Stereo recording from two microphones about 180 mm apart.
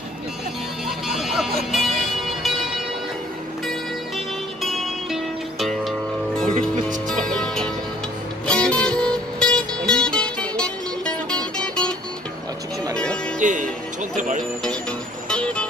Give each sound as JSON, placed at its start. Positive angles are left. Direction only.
{"t": 0.8, "sound": "a sound", "side_deg": 0}
{"t": 4.6, "sound": "music", "side_deg": 0}
{"t": 6.4, "sound": "music", "side_deg": -45}
{"t": 7.2, "sound": "music", "side_deg": 5}
{"t": 12.9, "sound": "music", "side_deg": 5}
{"t": 13.4, "sound": "music", "side_deg": -45}
{"t": 15.2, "sound": "music", "side_deg": 5}